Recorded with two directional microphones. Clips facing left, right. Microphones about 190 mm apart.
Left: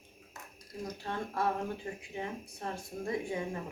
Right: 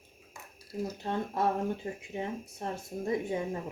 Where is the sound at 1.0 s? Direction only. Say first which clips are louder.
Right 3 dB; 25° right (ahead or behind).